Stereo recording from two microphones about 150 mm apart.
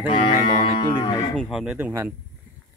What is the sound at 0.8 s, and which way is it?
Speech, 30° left (ahead or behind).